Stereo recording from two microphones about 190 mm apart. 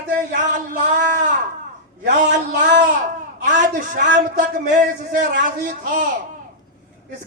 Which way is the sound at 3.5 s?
40° right (ahead or behind).